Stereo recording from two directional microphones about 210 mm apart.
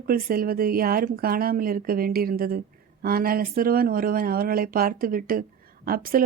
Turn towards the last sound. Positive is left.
turn(degrees=-45)  # may be behind; listen again after turning